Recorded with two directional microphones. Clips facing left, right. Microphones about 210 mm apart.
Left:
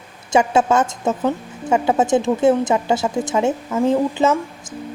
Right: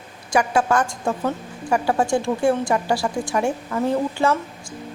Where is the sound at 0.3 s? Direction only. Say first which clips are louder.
Left 3 dB; 25° left (ahead or behind).